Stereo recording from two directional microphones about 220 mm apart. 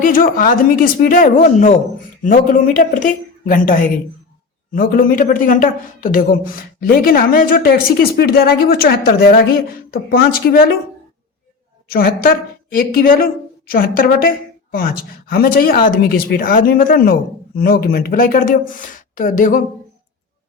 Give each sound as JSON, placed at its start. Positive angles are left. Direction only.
{"t": 0.0, "sound": "speech", "side_deg": 40}
{"t": 11.9, "sound": "speech", "side_deg": 40}